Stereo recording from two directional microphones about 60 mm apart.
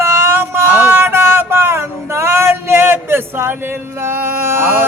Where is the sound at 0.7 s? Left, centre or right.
Right.